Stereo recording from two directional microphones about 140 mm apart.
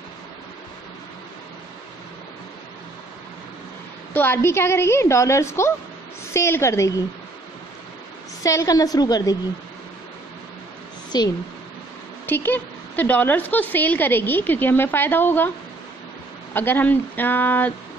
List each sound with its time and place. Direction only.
4.1 s a woman's voice: 15° left (ahead or behind)
8.4 s a woman's voice: 25° left (ahead or behind)
11.1 s a woman's voice: 30° left (ahead or behind)
12.3 s a woman's voice: 15° left (ahead or behind)
16.5 s a woman's voice: 15° left (ahead or behind)